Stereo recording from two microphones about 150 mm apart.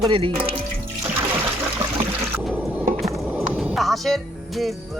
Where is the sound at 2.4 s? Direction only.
Centre (ahead or behind).